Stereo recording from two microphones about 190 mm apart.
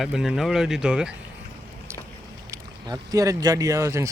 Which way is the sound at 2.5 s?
20° right (ahead or behind).